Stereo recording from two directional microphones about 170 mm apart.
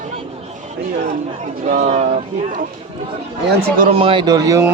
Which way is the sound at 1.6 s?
45° right (ahead or behind).